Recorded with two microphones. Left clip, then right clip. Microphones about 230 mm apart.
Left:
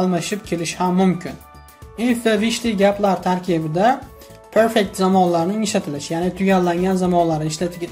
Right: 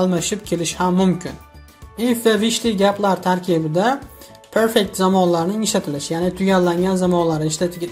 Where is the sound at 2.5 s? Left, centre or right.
Right.